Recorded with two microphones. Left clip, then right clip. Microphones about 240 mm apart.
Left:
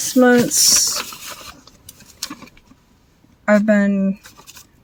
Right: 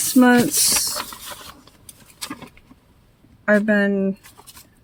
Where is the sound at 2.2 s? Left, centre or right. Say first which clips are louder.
Left 2 dB; centre.